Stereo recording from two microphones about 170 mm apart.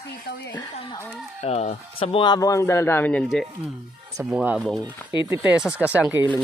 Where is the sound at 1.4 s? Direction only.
40° left (ahead or behind); by 3.2 s 10° left (ahead or behind).